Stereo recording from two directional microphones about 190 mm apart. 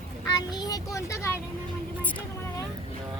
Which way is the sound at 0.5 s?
20° left (ahead or behind).